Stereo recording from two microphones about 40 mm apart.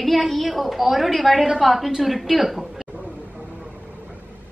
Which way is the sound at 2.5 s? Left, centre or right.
Centre.